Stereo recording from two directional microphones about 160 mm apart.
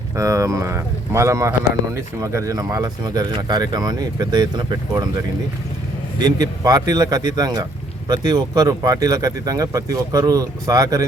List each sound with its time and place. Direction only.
0.2 s speech: 20° right (ahead or behind)
6.1 s speech: 25° right (ahead or behind)